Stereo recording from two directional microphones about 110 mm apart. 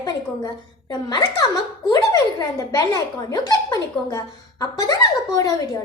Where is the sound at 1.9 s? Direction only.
35° left (ahead or behind).